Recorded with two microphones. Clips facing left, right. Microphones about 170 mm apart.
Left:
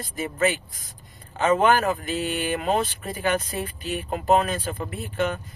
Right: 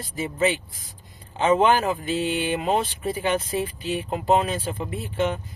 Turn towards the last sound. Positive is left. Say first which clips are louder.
# right 1 dB
turn(degrees=-25)  # may be behind; listen again after turning